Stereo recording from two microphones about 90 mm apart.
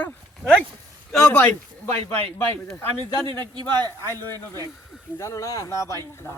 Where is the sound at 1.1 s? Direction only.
10° left (ahead or behind).